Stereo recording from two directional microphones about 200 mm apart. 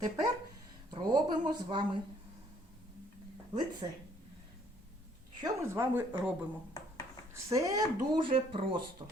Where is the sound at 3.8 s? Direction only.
25° right (ahead or behind).